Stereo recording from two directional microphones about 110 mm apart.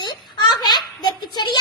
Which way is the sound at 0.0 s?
40° left (ahead or behind).